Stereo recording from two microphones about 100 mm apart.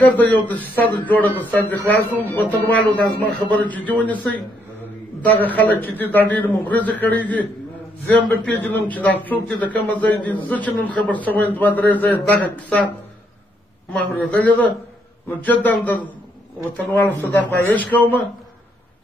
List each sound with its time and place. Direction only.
0.0 s a man's voice: 15° left (ahead or behind)
13.9 s a man's voice: 15° left (ahead or behind)